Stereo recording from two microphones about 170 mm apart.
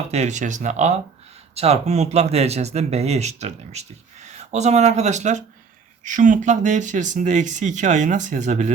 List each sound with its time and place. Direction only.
0.1 s speech: 45° right (ahead or behind)